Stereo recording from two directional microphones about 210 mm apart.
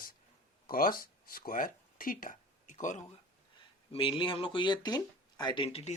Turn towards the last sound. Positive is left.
turn(degrees=25)  # may be behind; listen again after turning